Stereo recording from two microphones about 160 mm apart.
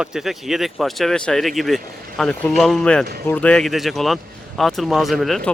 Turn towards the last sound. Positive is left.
turn(degrees=0)  # may be behind; listen again after turning